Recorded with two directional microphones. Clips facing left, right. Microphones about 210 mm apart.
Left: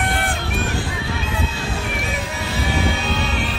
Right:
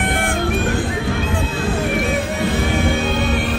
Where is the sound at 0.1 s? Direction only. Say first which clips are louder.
Right 5 dB; 50° right (ahead or behind).